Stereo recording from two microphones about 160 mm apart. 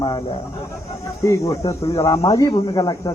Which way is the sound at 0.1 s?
40° left (ahead or behind).